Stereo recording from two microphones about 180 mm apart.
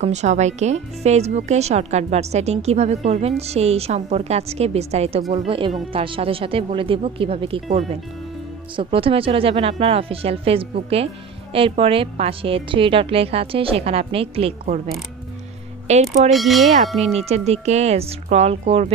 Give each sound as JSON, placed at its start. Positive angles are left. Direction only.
{"t": 0.0, "sound": "speech", "side_deg": -40}
{"t": 8.7, "sound": "speech", "side_deg": -30}
{"t": 15.9, "sound": "speech", "side_deg": -40}
{"t": 16.3, "sound": "a sound", "side_deg": 0}
{"t": 17.0, "sound": "speech", "side_deg": -35}